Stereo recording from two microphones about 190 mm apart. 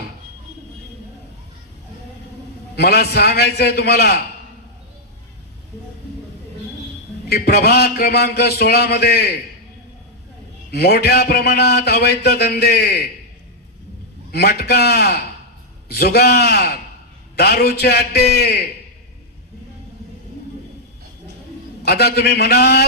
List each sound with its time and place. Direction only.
2.7 s a man's voice: 55° left (ahead or behind)
7.3 s a man's voice: 55° left (ahead or behind)
10.7 s a man's voice: 55° left (ahead or behind)
14.3 s a man's voice: 55° left (ahead or behind)
21.8 s a man's voice: 55° left (ahead or behind)